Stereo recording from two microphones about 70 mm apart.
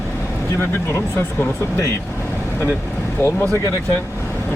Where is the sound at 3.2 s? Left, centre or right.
Left.